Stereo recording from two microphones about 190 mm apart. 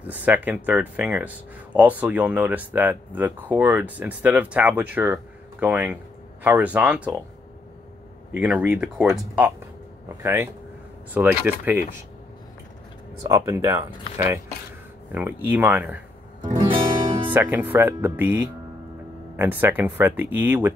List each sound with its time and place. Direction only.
0.0 s speech: 10° right (ahead or behind)
8.3 s speech: 10° right (ahead or behind)
13.2 s speech: 15° right (ahead or behind)
16.5 s music: 25° right (ahead or behind)
17.3 s speech: 10° right (ahead or behind)